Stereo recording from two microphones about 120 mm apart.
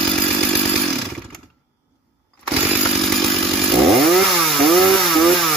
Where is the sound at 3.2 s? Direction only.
Centre (ahead or behind).